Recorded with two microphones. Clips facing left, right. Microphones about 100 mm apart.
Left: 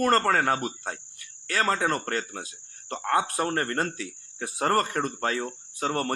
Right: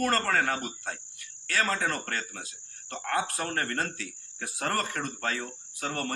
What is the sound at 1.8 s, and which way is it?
Speech, 35° left (ahead or behind).